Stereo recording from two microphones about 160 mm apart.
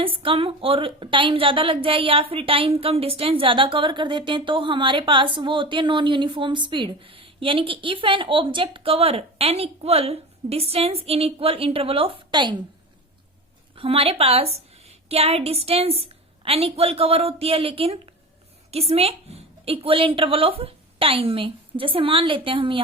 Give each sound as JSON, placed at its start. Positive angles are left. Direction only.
{"t": 0.0, "sound": "a woman's voice", "side_deg": -35}
{"t": 13.7, "sound": "a woman's voice", "side_deg": -35}